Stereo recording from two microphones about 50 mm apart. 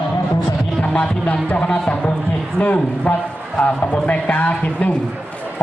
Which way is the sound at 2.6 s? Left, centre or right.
Left.